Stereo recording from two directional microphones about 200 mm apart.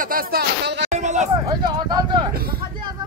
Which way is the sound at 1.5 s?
20° right (ahead or behind).